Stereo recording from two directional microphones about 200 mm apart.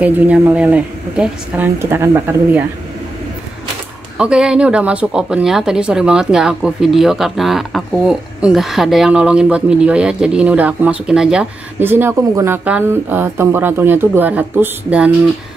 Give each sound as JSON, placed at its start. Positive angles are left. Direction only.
{"t": 0.0, "sound": "a woman's voice", "side_deg": -5}
{"t": 4.2, "sound": "speech", "side_deg": -5}